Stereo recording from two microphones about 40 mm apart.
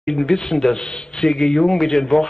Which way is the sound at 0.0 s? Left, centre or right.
Centre.